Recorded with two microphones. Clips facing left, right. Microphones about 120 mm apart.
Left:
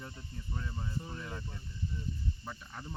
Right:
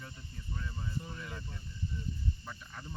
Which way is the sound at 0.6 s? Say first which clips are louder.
Left 1 dB; 25° left (ahead or behind).